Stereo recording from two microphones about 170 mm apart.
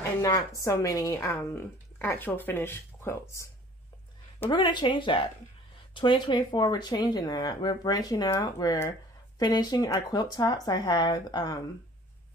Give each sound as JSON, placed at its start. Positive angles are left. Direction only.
{"t": 0.2, "sound": "a woman's voice", "side_deg": 20}
{"t": 4.5, "sound": "speech", "side_deg": 25}